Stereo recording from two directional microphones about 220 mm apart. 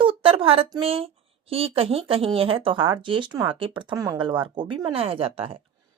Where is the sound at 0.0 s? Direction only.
25° right (ahead or behind).